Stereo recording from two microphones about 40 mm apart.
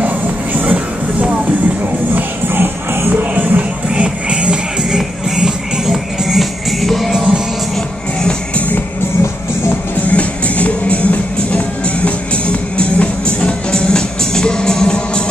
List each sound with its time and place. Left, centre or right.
0.0 s music: right
2.5 s music: right
3.1 s music: right
3.9 s music: right
4.8 s music: centre
7.7 s music: centre
8.5 s music: left
10.1 s music: left